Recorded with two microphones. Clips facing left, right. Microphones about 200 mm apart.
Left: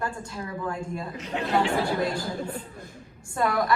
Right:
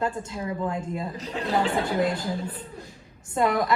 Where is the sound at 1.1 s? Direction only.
35° right (ahead or behind).